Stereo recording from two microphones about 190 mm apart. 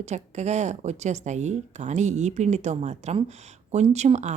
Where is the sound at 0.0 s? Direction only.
35° right (ahead or behind).